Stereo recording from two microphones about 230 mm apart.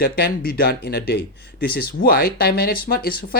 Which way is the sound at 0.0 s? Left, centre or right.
Left.